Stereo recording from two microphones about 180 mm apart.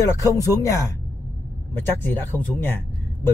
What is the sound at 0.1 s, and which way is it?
Speech, 20° left (ahead or behind).